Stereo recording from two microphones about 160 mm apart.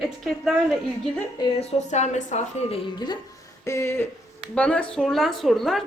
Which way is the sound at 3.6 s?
15° left (ahead or behind).